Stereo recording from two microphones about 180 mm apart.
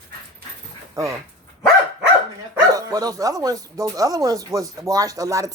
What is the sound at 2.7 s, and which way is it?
Speech, 20° right (ahead or behind).